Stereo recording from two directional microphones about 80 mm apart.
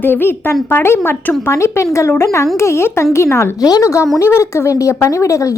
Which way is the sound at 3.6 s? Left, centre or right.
Left.